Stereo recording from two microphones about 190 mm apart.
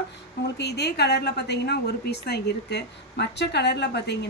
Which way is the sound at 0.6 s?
60° left (ahead or behind).